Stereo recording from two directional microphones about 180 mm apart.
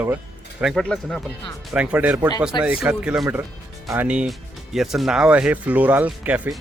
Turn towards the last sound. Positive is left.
turn(degrees=-10)  # may be behind; listen again after turning